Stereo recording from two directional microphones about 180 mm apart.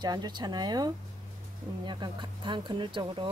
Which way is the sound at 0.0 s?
25° right (ahead or behind).